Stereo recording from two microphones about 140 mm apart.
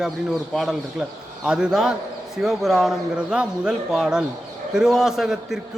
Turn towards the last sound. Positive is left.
turn(degrees=-5)  # may be behind; listen again after turning